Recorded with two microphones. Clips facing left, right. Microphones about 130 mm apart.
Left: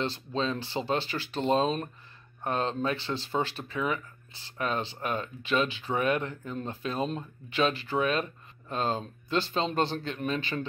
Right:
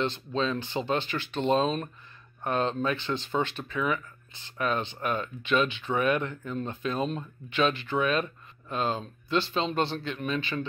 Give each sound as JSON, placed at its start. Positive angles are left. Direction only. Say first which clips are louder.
{"t": 0.0, "sound": "speech", "louder": "right 2 dB", "side_deg": 35}